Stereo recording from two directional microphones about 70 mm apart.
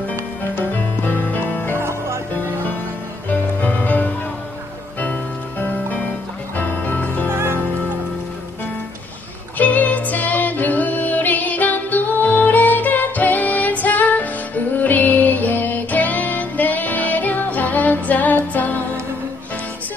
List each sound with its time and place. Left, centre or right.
0.6 s music: left
1.8 s music: right
3.3 s music: left
7.2 s music: right
9.6 s music: left